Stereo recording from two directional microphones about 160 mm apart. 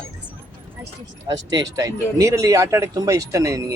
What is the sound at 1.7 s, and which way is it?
Speech, 20° right (ahead or behind).